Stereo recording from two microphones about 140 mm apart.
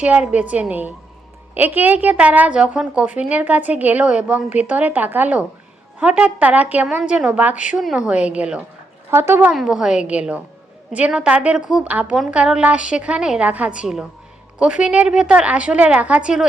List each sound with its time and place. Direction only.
0.0 s a woman's voice: 10° right (ahead or behind)
9.5 s a woman's voice: 5° right (ahead or behind)